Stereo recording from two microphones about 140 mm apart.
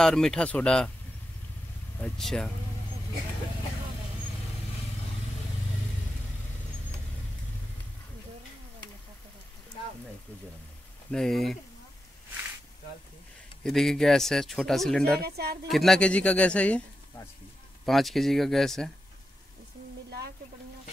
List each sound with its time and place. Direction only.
0.0 s speech: 5° left (ahead or behind)
2.0 s speech: 5° left (ahead or behind)
11.1 s speech: 5° left (ahead or behind)
13.7 s speech: centre (ahead or behind)
15.2 s speech: 90° right
15.7 s speech: centre (ahead or behind)